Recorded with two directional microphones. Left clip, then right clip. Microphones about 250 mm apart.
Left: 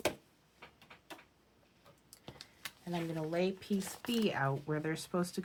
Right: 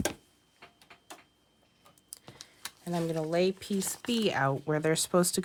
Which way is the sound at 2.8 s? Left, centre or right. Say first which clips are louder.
Right 7 dB; right.